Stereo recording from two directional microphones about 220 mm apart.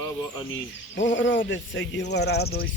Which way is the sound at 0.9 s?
55° left (ahead or behind).